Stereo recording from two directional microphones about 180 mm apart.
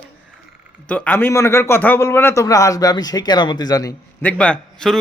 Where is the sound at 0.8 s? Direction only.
10° left (ahead or behind).